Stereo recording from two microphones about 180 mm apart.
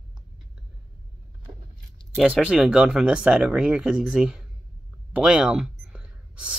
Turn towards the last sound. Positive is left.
turn(degrees=-5)  # may be behind; listen again after turning